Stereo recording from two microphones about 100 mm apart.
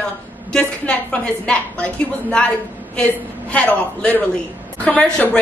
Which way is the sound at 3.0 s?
15° left (ahead or behind).